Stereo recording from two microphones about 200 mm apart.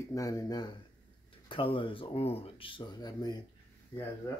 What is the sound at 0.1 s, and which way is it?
Speech, 15° left (ahead or behind).